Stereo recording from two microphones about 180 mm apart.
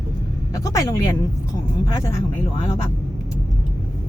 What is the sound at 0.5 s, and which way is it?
Speech, 20° left (ahead or behind).